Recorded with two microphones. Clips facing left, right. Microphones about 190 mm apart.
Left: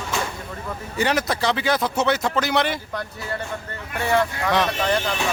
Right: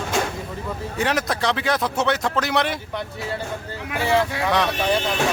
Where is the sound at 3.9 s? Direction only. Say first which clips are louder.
Right 1 dB; 90° right.